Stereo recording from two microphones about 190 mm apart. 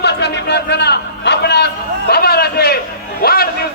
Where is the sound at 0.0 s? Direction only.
60° left (ahead or behind).